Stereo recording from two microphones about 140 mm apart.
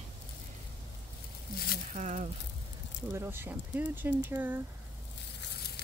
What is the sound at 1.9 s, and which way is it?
Speech, 60° right (ahead or behind).